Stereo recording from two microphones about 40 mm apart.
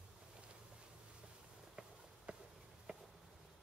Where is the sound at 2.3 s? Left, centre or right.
Right.